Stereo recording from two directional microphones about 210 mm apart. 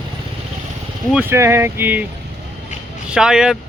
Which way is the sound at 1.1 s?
10° right (ahead or behind).